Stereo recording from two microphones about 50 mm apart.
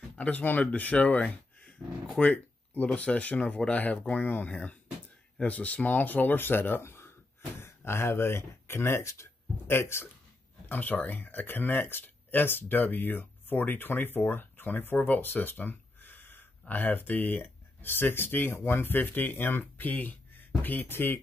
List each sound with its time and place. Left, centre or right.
0.2 s speech: left
1.3 s a sound: left
2.3 s speech: left
6.8 s a sound: left
7.6 s speech: left
10.7 s speech: left